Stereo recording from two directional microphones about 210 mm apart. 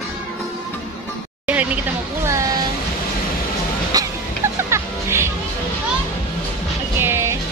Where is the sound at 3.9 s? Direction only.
15° right (ahead or behind).